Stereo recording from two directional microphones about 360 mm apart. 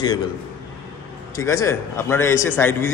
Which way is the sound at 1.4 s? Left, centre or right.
Centre.